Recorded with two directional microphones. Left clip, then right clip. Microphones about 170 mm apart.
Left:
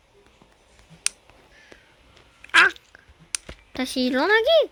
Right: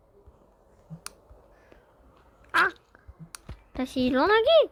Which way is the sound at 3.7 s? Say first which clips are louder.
Left 2 dB; 15° left (ahead or behind).